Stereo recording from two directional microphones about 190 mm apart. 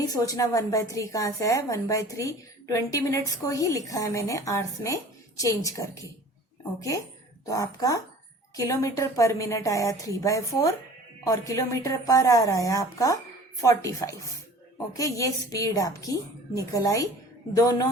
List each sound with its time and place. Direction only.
0.0 s a woman's voice: 20° left (ahead or behind)
7.4 s a woman's voice: 20° left (ahead or behind)